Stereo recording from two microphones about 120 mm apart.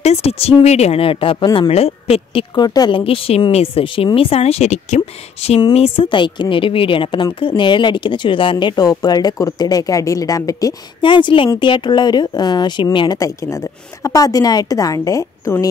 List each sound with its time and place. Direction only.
0.0 s speech: 60° left (ahead or behind)
2.5 s speech: 35° left (ahead or behind)
3.0 s speech: 55° left (ahead or behind)
5.6 s speech: 55° left (ahead or behind); by 10.7 s 30° left (ahead or behind)
11.0 s a woman's voice: 40° left (ahead or behind)